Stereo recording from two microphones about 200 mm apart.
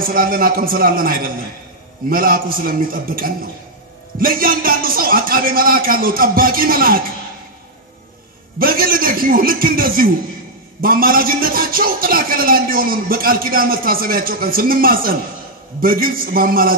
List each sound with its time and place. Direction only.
0.1 s a man's voice: 45° right (ahead or behind)
8.5 s a man's voice: 45° right (ahead or behind)